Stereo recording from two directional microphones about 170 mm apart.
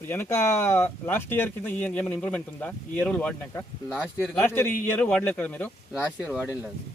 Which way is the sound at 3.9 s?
5° right (ahead or behind).